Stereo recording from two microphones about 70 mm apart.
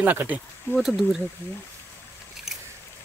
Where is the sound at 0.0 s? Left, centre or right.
Right.